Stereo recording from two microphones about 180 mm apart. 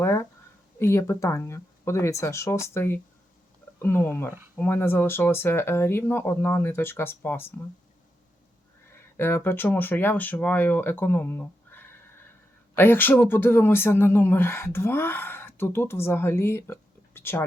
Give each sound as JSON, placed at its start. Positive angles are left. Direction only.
{"t": 0.0, "sound": "a sound", "side_deg": 15}
{"t": 0.8, "sound": "speech", "side_deg": 15}
{"t": 9.1, "sound": "speech", "side_deg": 10}